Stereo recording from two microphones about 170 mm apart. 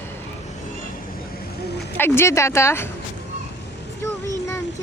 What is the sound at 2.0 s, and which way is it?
Speech, 15° left (ahead or behind).